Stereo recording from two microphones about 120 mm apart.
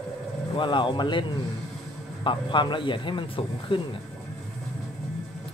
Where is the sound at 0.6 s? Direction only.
40° left (ahead or behind).